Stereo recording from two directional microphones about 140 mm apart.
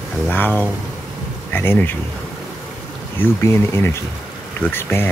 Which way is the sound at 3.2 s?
15° left (ahead or behind).